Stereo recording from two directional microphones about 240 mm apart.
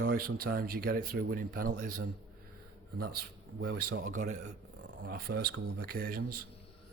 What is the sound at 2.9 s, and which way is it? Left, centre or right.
Speech, right.